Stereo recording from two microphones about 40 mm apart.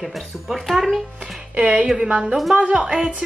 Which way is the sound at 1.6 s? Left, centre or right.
Right.